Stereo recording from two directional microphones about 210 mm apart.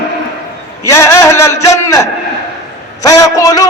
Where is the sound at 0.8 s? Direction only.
15° left (ahead or behind).